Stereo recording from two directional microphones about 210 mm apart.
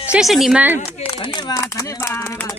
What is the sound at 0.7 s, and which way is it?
Speech, 25° left (ahead or behind).